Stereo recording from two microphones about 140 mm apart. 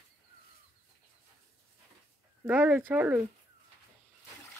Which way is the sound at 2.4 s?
15° right (ahead or behind).